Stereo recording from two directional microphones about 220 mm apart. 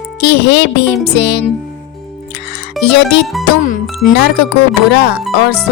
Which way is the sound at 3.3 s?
Centre (ahead or behind).